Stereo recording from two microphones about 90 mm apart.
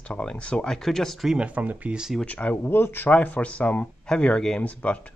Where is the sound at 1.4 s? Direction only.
15° right (ahead or behind).